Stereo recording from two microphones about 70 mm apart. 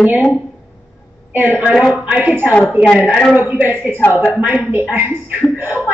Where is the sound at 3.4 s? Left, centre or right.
Right.